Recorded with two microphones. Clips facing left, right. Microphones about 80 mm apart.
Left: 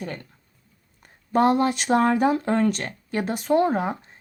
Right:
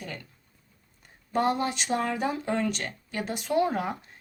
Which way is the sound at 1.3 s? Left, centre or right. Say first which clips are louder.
Left 7 dB; left.